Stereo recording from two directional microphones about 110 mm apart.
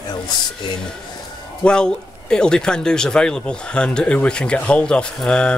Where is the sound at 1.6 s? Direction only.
10° left (ahead or behind).